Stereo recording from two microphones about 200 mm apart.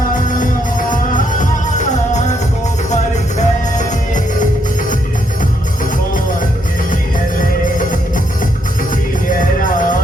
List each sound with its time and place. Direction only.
0.3 s music: 40° left (ahead or behind)
7.8 s music: 40° left (ahead or behind)
9.4 s music: 45° left (ahead or behind)